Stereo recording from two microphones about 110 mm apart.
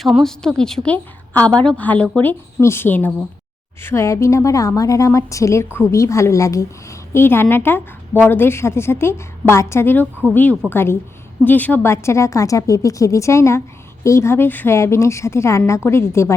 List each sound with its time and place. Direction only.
0.0 s a woman's voice: centre (ahead or behind); by 16.3 s 25° left (ahead or behind)